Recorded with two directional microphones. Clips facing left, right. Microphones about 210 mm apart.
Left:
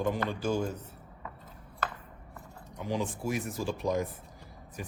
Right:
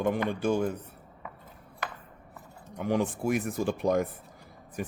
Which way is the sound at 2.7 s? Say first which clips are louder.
Right 5 dB; 55° right (ahead or behind).